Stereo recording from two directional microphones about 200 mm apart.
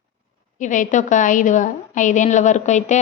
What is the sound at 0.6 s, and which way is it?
A woman's voice, 40° left (ahead or behind).